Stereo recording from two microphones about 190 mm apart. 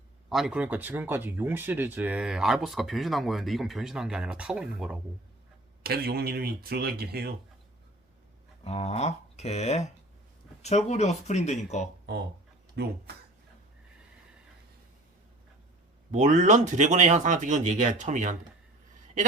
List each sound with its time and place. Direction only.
0.3 s speech: centre (ahead or behind)
5.8 s speech: 55° right (ahead or behind)
8.6 s speech: 35° left (ahead or behind)
12.7 s speech: 60° right (ahead or behind)
16.1 s speech: 40° right (ahead or behind)